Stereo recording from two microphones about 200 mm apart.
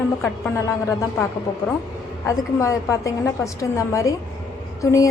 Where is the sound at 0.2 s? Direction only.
15° left (ahead or behind).